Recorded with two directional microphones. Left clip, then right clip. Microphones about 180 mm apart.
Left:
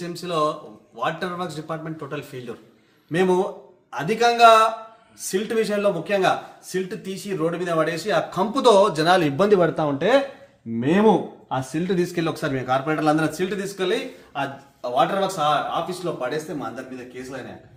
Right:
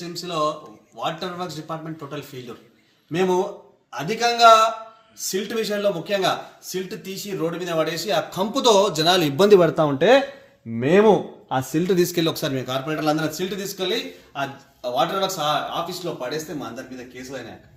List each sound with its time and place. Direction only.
0.0 s speech: 15° left (ahead or behind); by 9.4 s 30° right (ahead or behind)
9.4 s speech: 65° right (ahead or behind)
10.8 s speech: 50° right (ahead or behind)
12.8 s speech: 10° right (ahead or behind)